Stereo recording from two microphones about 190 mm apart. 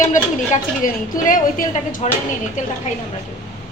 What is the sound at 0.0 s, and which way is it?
A woman's voice, 40° left (ahead or behind).